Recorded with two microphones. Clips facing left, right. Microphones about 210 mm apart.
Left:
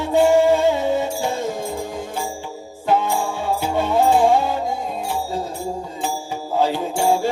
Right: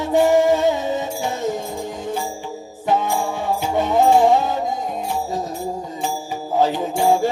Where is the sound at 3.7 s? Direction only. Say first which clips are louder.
Right 2 dB; 15° right (ahead or behind).